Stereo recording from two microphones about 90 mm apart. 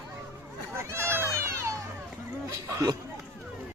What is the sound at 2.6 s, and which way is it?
Chatter, 35° right (ahead or behind).